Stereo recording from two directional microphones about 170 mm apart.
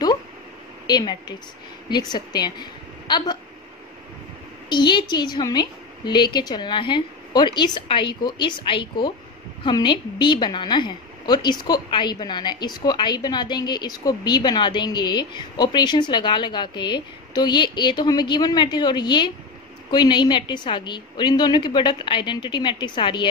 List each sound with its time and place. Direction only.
0.8 s a woman's voice: 25° left (ahead or behind)
4.6 s a woman's voice: 25° left (ahead or behind)